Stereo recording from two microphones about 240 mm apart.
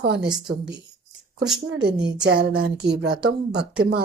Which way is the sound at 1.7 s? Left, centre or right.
Right.